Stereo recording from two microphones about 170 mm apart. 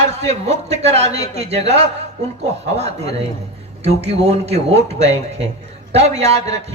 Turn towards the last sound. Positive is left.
turn(degrees=-40)  # may be behind; listen again after turning